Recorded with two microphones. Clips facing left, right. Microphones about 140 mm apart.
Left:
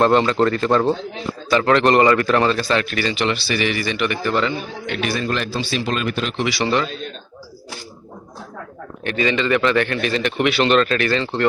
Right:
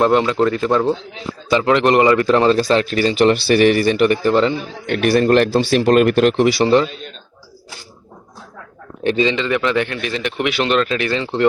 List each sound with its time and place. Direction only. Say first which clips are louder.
0.0 s a man's voice: right 1 dB; 10° right (ahead or behind); by 4.5 s 30° right (ahead or behind)
4.9 s speech: right 9 dB; 60° right (ahead or behind)
9.0 s a man's voice: right 3 dB; 25° right (ahead or behind)